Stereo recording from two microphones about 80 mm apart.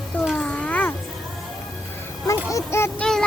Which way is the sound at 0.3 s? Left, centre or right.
Centre.